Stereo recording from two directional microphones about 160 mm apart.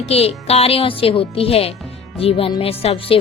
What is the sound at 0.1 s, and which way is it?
Speech, 40° left (ahead or behind).